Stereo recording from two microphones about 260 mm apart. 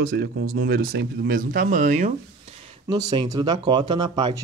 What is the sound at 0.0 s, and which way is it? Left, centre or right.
Speech, right.